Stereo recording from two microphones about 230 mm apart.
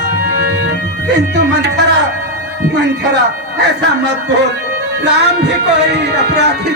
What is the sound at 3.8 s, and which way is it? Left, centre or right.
Speech, right.